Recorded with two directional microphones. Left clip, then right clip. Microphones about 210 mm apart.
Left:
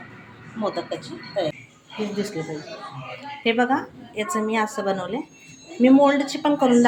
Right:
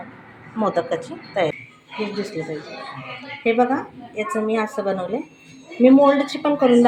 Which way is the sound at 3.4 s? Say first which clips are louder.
Right 2 dB; 10° left (ahead or behind).